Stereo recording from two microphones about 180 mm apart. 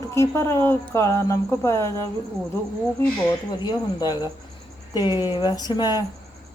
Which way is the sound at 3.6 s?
25° left (ahead or behind).